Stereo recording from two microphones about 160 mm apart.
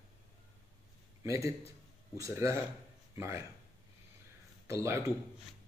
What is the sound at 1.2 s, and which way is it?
A man's voice, 20° right (ahead or behind).